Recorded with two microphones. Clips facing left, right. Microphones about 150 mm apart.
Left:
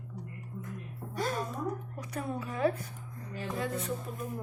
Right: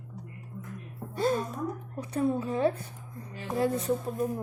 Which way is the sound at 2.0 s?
30° right (ahead or behind).